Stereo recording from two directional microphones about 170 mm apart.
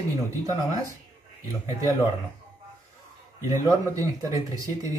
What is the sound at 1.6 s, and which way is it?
Speech, 15° right (ahead or behind).